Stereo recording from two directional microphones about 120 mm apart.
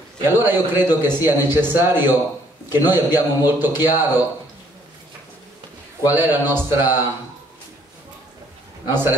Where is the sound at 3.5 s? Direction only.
20° right (ahead or behind).